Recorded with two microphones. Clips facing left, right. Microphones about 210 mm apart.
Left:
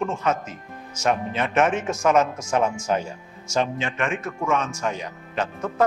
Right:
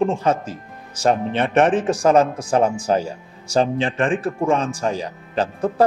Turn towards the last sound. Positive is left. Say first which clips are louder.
# right 5 dB
turn(degrees=-35)  # may be behind; listen again after turning